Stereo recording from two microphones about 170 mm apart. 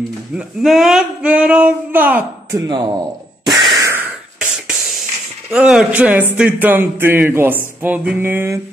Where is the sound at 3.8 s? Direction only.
10° right (ahead or behind).